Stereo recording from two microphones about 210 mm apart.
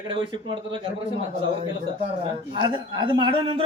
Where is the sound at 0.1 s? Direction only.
25° right (ahead or behind).